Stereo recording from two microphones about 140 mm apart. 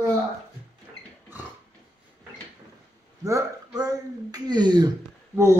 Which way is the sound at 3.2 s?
20° right (ahead or behind).